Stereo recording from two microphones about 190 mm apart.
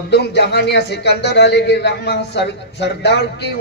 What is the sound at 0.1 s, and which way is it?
A man's voice, 60° left (ahead or behind).